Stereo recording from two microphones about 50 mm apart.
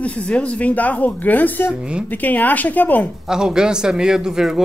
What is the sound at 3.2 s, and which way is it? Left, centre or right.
Speech, centre.